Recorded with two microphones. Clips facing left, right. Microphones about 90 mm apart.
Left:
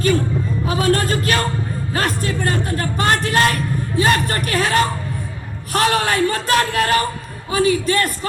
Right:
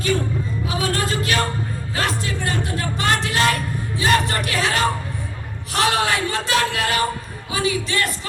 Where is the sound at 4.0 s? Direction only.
45° left (ahead or behind).